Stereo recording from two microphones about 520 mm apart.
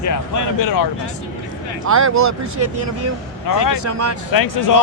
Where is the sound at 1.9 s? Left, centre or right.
Right.